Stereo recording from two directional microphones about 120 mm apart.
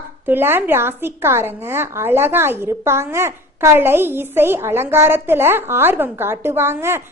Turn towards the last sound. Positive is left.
turn(degrees=-20)  # may be behind; listen again after turning